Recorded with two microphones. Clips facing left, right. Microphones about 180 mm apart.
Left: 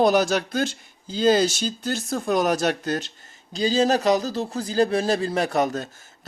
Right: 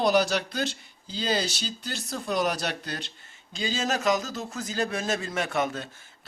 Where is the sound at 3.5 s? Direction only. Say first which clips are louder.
Left 9 dB; 35° left (ahead or behind).